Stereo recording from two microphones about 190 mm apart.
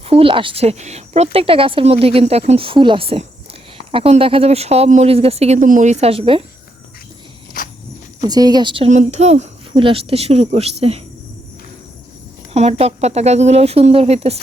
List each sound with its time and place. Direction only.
0.0 s speech: 30° right (ahead or behind)
7.6 s walk: 45° left (ahead or behind)
8.3 s a woman's voice: 20° right (ahead or behind)
8.9 s speech: 35° right (ahead or behind)
12.5 s speech: 35° right (ahead or behind)